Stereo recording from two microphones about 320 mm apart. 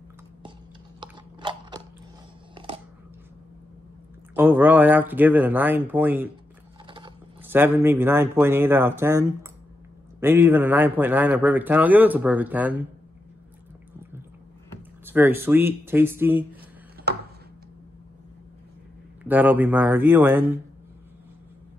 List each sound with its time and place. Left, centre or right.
1.0 s crunch: centre
2.5 s a sound: centre
4.4 s a man's voice: centre
15.0 s speech: centre
19.2 s a man's voice: centre